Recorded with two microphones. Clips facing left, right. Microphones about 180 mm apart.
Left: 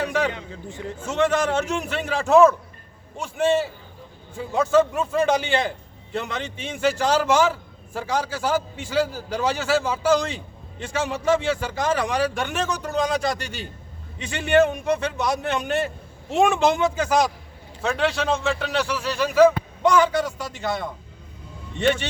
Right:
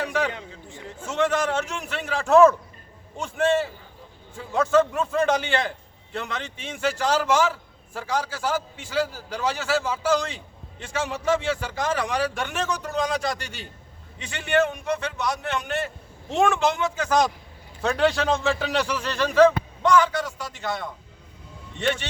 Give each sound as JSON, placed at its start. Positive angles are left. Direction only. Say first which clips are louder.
{"t": 0.0, "sound": "a sound", "louder": "left 2 dB", "side_deg": -5}
{"t": 1.2, "sound": "a man's voice", "louder": "left 2 dB", "side_deg": -5}
{"t": 10.9, "sound": "a man's voice", "louder": "left 2 dB", "side_deg": 25}
{"t": 11.3, "sound": "speech", "louder": "left 3 dB", "side_deg": 10}